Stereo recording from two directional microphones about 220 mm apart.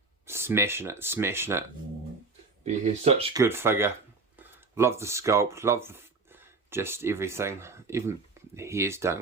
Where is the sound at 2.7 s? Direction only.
30° right (ahead or behind).